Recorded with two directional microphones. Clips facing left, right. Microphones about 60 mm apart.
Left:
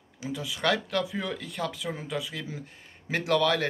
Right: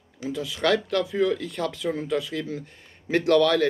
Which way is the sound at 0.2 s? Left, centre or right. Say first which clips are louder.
Right 4 dB; centre.